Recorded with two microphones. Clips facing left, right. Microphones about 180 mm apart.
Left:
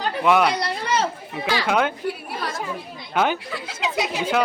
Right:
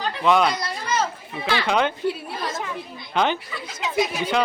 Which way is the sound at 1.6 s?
5° left (ahead or behind).